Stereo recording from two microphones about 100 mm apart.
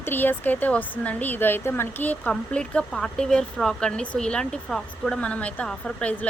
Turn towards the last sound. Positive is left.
turn(degrees=10)  # may be behind; listen again after turning